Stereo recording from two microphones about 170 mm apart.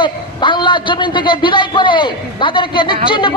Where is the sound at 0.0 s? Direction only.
30° left (ahead or behind).